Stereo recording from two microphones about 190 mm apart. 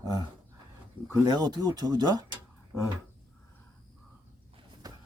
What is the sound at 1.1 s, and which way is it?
Speech, 20° right (ahead or behind).